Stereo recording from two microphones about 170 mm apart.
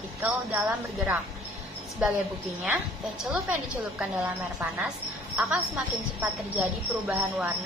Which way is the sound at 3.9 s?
5° right (ahead or behind).